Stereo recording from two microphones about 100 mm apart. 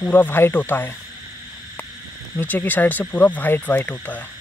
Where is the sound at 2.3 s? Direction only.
20° left (ahead or behind).